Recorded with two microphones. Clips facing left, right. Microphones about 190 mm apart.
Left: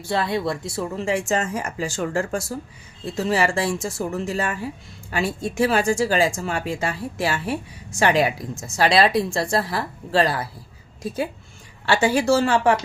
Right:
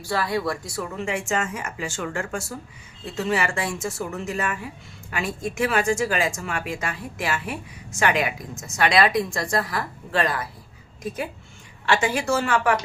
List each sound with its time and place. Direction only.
0.0 s speech: 25° left (ahead or behind)